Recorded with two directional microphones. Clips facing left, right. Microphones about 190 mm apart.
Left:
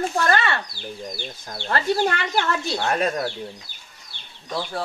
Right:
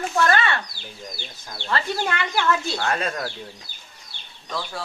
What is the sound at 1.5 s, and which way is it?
Speech, 45° left (ahead or behind).